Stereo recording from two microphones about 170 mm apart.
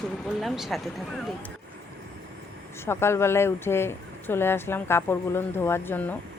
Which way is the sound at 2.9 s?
15° left (ahead or behind).